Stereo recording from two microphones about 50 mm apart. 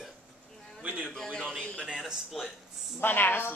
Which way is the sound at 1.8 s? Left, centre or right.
Centre.